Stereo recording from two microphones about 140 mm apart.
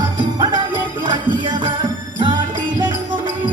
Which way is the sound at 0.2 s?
35° right (ahead or behind).